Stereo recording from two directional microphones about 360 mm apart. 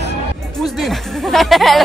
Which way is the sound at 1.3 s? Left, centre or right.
Centre.